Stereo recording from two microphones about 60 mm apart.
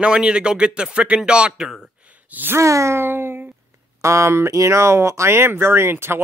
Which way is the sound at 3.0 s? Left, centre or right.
Right.